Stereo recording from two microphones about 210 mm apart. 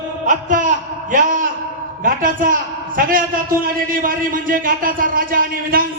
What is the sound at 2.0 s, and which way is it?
A man's voice, 40° right (ahead or behind).